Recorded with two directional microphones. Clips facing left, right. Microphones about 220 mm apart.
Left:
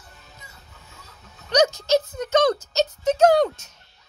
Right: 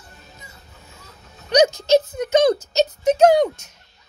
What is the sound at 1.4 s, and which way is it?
Speech, 15° right (ahead or behind).